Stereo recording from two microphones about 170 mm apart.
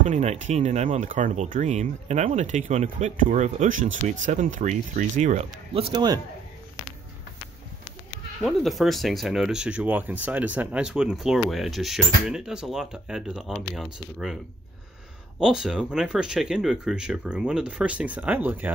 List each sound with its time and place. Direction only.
0.1 s speech: 40° right (ahead or behind)
5.8 s a man's voice: 30° right (ahead or behind)
8.4 s speech: centre (ahead or behind)